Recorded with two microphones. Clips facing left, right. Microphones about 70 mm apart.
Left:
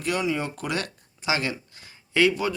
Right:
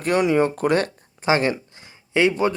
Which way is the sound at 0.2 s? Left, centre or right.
Right.